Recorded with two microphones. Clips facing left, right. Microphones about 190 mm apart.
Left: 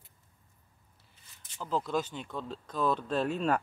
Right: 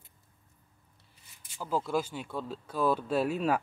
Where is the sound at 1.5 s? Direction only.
10° right (ahead or behind).